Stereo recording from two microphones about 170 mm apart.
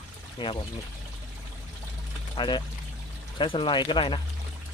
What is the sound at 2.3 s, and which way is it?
Speech, 25° left (ahead or behind).